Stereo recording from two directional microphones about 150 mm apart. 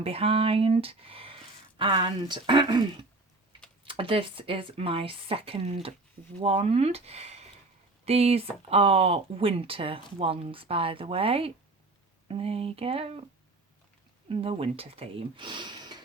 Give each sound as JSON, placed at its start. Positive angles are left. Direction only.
{"t": 0.0, "sound": "speech", "side_deg": -40}
{"t": 14.3, "sound": "speech", "side_deg": -40}